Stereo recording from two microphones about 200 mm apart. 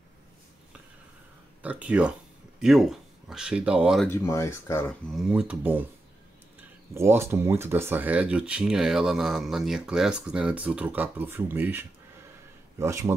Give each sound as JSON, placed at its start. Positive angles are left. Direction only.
{"t": 1.6, "sound": "speech", "side_deg": -5}
{"t": 4.1, "sound": "speech", "side_deg": 15}
{"t": 6.9, "sound": "speech", "side_deg": -15}